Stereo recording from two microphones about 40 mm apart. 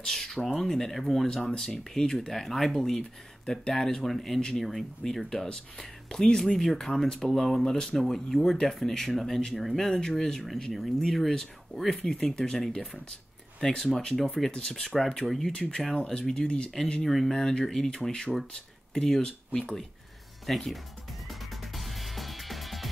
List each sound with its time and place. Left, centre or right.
0.0 s speech: centre
1.2 s speech: centre
14.5 s speech: left
15.2 s speech: centre
15.9 s speech: left
17.3 s speech: centre
20.4 s speech: centre
21.3 s music: centre